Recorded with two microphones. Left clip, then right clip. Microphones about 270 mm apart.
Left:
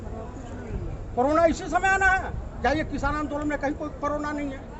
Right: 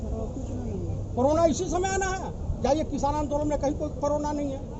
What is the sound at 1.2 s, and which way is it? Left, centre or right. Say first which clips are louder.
A man's voice: left 1 dB; centre.